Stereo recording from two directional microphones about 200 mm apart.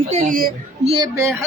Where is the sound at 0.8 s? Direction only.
30° right (ahead or behind).